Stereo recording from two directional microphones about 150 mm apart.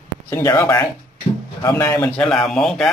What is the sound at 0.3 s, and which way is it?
Speech, 20° left (ahead or behind).